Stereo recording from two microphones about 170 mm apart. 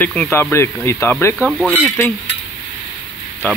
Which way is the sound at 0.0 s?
10° left (ahead or behind).